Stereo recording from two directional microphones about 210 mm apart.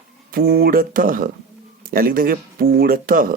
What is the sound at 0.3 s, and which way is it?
Speech, 45° right (ahead or behind).